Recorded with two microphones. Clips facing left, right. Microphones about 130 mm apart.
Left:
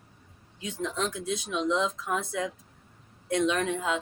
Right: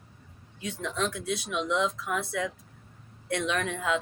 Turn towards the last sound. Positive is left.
turn(degrees=25)  # may be behind; listen again after turning